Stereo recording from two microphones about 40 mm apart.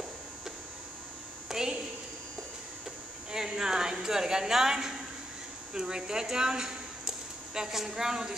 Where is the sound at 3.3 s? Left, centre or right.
Centre.